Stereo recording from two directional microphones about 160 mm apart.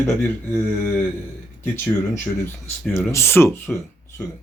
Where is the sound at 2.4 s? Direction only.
10° left (ahead or behind).